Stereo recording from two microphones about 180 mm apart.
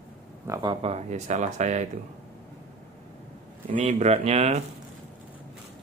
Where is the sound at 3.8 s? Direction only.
35° right (ahead or behind).